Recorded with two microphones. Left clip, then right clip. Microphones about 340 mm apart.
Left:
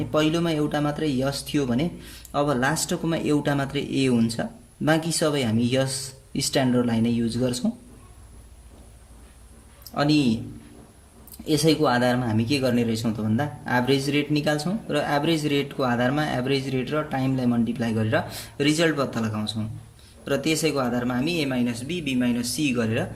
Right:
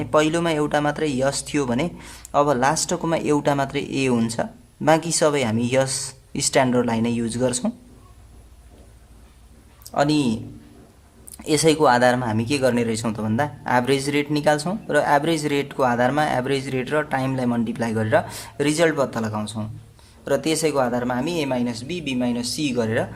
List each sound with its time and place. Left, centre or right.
0.0 s speech: right
9.8 s speech: centre
11.4 s speech: right